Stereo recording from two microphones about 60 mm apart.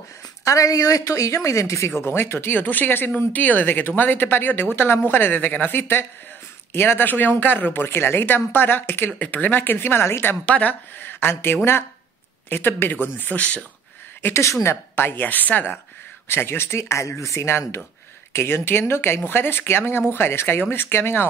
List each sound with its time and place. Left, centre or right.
0.5 s a woman's voice: left
2.0 s speech: left
9.2 s speech: left
10.0 s speech: left
10.4 s speech: left
13.4 s speech: left
14.2 s speech: left
16.3 s speech: left
17.2 s speech: left